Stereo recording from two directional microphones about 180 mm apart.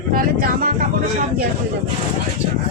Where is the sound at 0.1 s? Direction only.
50° right (ahead or behind).